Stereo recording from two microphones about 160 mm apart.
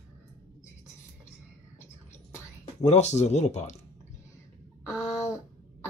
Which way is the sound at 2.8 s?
45° left (ahead or behind).